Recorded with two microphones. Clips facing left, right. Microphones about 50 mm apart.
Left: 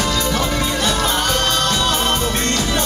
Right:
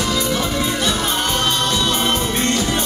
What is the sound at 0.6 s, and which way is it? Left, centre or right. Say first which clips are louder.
Music: left 1 dB; centre.